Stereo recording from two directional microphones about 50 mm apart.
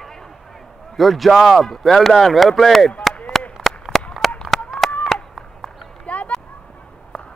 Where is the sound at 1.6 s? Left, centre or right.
Centre.